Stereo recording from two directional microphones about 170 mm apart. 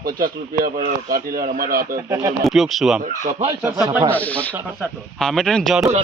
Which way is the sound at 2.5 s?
Centre (ahead or behind).